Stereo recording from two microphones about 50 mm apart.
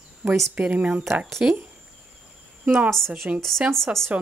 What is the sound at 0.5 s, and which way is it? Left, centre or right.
Speech, right.